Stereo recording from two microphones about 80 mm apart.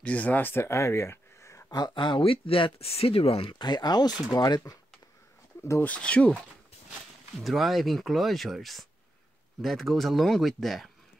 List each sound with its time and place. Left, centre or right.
0.0 s speech: centre; by 1.8 s left
1.8 s speech: left
3.5 s speech: left
5.6 s speech: left
5.9 s speech: centre
7.3 s speech: centre